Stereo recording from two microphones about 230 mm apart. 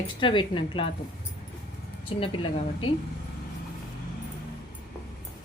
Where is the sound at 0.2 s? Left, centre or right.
Left.